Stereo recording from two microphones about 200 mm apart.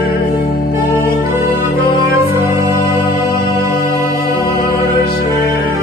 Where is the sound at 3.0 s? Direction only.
50° left (ahead or behind).